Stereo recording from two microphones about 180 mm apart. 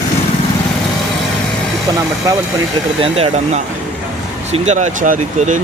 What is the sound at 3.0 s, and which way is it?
Speech, 35° right (ahead or behind).